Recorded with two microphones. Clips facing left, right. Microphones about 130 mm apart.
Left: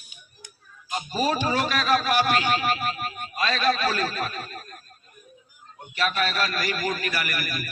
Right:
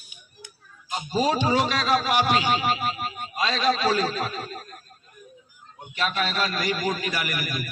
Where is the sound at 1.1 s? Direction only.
20° right (ahead or behind).